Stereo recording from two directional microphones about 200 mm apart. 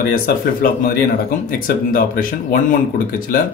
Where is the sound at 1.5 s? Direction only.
45° left (ahead or behind).